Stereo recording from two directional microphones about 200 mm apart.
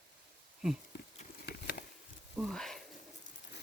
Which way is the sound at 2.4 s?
Centre (ahead or behind).